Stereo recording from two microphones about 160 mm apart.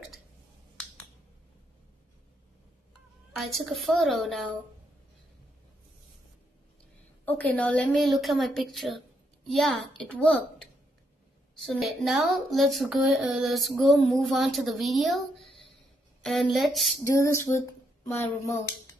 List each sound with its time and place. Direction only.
3.3 s a woman's voice: centre (ahead or behind)
7.2 s a woman's voice: 10° left (ahead or behind)
11.5 s a woman's voice: centre (ahead or behind)
17.0 s a sound: 15° left (ahead or behind)